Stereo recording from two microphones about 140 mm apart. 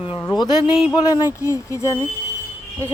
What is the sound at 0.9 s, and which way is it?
Speech, 30° left (ahead or behind).